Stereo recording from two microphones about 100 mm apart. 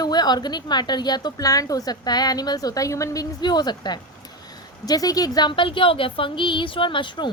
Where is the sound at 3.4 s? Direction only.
45° left (ahead or behind).